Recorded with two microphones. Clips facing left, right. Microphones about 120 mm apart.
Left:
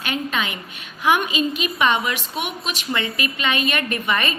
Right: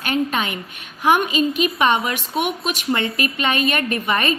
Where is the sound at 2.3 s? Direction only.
50° right (ahead or behind).